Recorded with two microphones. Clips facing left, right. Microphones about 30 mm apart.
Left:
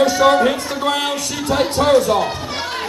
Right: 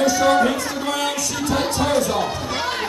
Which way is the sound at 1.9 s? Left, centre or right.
Centre.